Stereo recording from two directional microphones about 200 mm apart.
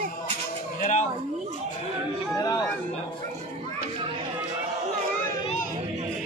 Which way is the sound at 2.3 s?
20° left (ahead or behind).